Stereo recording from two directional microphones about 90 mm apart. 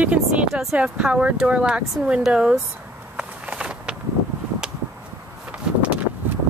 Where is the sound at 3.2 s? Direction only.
10° right (ahead or behind).